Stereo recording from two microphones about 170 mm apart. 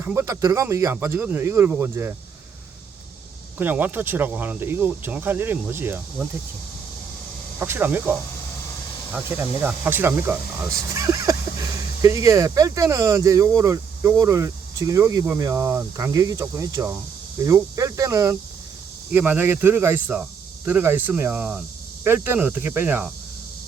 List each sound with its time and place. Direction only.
0.0 s speech: 15° right (ahead or behind)
3.6 s speech: 10° right (ahead or behind)
7.6 s speech: 10° right (ahead or behind)
9.1 s speech: 10° right (ahead or behind)